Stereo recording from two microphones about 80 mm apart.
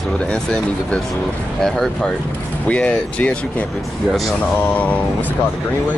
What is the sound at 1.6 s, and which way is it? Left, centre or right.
Speech, centre.